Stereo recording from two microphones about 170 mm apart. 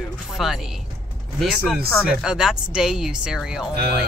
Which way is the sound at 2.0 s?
5° right (ahead or behind).